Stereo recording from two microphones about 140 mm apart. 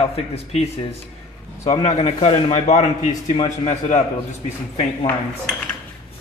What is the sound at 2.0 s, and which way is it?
Speech, 45° left (ahead or behind).